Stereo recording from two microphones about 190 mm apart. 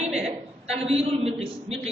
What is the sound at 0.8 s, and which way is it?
Speech, 30° right (ahead or behind).